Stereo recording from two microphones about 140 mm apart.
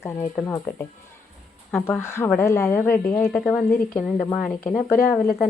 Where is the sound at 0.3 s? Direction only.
20° left (ahead or behind).